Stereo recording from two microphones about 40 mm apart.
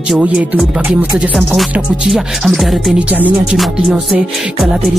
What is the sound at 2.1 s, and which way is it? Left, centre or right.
Music, centre.